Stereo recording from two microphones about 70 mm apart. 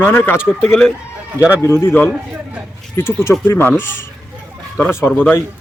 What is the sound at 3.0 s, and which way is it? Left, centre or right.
Speech, left.